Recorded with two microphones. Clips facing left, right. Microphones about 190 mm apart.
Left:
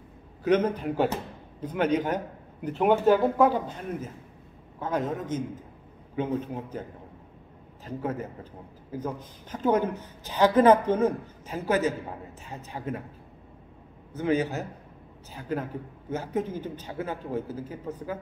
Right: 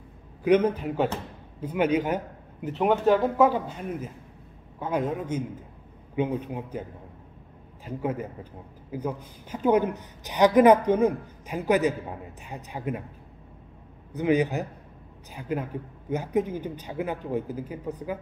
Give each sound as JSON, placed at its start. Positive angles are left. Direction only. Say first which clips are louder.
{"t": 0.4, "sound": "a woman's voice", "louder": "right 2 dB", "side_deg": -10}
{"t": 7.8, "sound": "a woman's voice", "louder": "right 2 dB", "side_deg": -10}
{"t": 14.1, "sound": "a woman's voice", "louder": "right 3 dB", "side_deg": -15}